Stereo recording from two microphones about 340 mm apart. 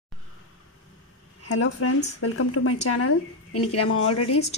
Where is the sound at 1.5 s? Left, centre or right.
Left.